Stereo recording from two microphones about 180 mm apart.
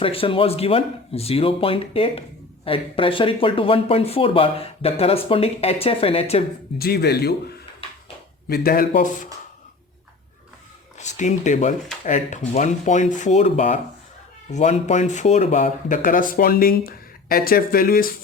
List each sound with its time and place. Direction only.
0.0 s speech: 30° left (ahead or behind)
6.7 s speech: 60° left (ahead or behind)
10.9 s speech: 40° left (ahead or behind)